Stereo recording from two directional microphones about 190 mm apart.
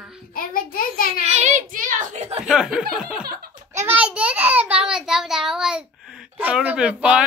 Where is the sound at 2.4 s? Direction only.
5° right (ahead or behind).